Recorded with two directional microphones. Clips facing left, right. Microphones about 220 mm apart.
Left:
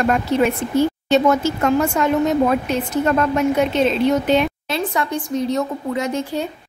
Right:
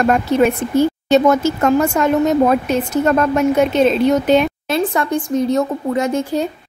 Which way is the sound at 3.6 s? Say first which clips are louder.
Right 3 dB; 45° right (ahead or behind).